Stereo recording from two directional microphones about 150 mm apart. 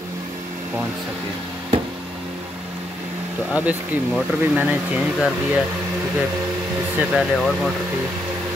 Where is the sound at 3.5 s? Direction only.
10° right (ahead or behind).